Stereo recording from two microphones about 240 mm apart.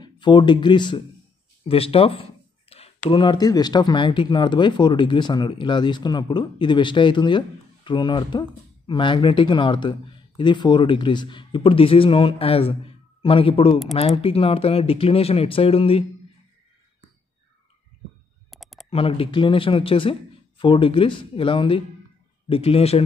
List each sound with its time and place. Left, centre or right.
0.0 s speech: centre
18.5 s a sound: centre
18.9 s speech: left